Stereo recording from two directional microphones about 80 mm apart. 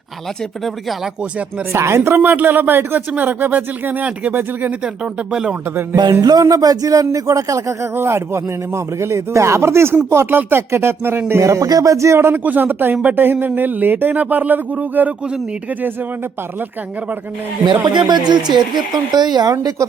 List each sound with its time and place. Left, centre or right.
0.6 s speech: centre
1.2 s speech: centre
1.7 s speech: right; by 5.5 s centre
6.2 s speech: right
12.4 s speech: right
17.8 s speech: right